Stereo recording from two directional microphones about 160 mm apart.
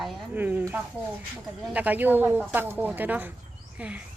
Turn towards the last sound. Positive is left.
turn(degrees=-10)  # may be behind; listen again after turning